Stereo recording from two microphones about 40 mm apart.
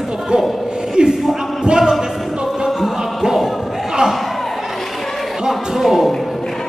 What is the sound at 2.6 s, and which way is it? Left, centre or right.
Music, centre.